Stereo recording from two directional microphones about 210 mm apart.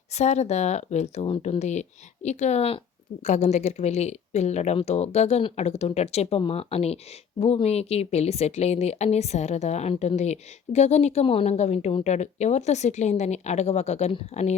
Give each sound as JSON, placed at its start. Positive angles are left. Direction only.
{"t": 0.2, "sound": "a woman's voice", "side_deg": 30}